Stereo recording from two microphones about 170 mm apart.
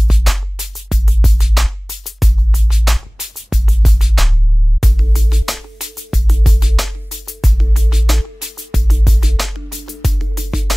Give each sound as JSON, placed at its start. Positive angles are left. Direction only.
{"t": 0.0, "sound": "music", "side_deg": 0}